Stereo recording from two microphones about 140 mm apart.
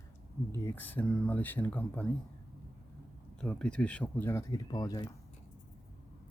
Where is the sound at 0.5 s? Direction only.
15° left (ahead or behind).